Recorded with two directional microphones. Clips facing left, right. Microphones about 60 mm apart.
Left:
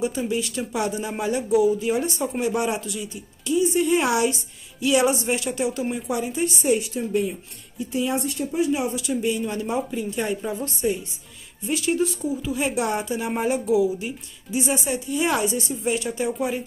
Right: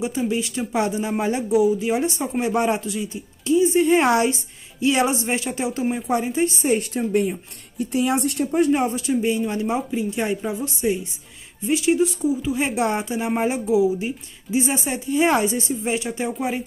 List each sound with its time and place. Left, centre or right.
0.3 s a woman's voice: right
6.8 s speech: right
8.9 s a woman's voice: right
12.5 s a woman's voice: right